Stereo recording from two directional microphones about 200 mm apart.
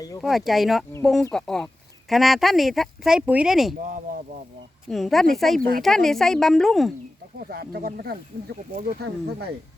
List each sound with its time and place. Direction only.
0.2 s speech: centre (ahead or behind)
4.9 s speech: centre (ahead or behind)
5.5 s speech: 45° right (ahead or behind)
5.8 s speech: centre (ahead or behind)
7.3 s speech: 50° right (ahead or behind)